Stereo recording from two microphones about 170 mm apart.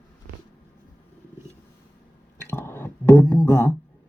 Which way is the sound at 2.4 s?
15° left (ahead or behind).